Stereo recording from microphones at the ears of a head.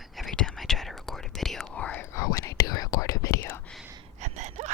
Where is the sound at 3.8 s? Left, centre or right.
Right.